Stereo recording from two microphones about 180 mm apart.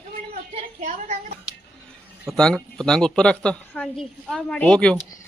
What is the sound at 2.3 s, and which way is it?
A woman's voice, 5° left (ahead or behind).